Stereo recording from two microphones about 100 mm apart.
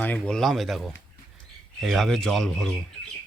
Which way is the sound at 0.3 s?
Centre (ahead or behind).